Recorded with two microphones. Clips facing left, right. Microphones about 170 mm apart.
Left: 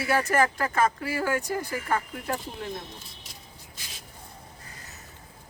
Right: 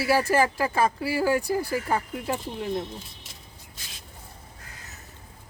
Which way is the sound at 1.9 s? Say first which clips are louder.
Left 1 dB; 20° right (ahead or behind).